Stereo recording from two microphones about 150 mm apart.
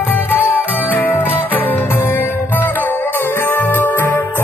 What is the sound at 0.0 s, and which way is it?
Music, 15° left (ahead or behind).